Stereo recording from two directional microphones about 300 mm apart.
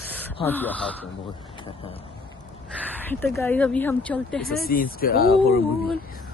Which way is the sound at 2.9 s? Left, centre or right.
Centre.